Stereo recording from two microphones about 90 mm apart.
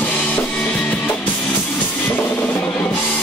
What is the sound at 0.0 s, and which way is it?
Drum kit, 15° left (ahead or behind).